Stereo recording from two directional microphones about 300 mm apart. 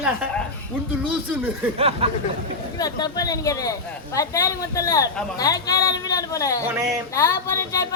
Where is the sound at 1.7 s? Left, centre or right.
Centre.